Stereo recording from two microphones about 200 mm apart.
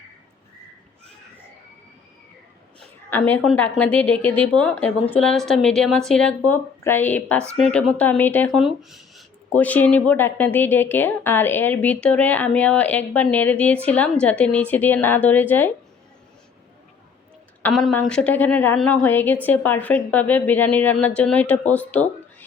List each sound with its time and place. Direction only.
3.1 s a woman's voice: 10° left (ahead or behind)
17.6 s a woman's voice: centre (ahead or behind)